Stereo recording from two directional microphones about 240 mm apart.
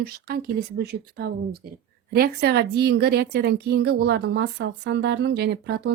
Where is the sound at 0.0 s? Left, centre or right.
Right.